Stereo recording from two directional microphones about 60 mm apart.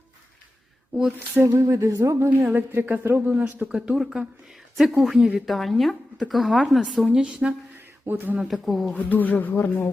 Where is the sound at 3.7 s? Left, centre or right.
Centre.